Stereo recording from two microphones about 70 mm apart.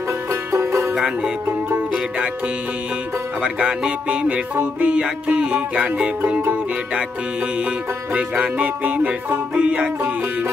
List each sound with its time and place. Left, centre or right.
0.3 s music: right
0.9 s music: centre
3.4 s music: centre
8.1 s music: right